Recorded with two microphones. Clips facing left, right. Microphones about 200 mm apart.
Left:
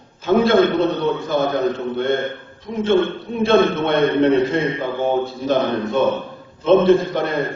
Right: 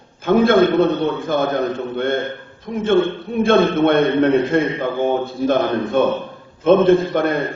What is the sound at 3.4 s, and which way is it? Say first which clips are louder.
A man's voice: right 1 dB; 50° right (ahead or behind).